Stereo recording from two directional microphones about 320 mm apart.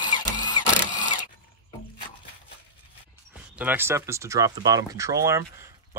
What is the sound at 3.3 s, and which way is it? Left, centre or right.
Speech, centre.